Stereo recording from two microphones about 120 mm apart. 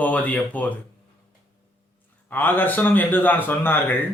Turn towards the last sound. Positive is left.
turn(degrees=15)  # may be behind; listen again after turning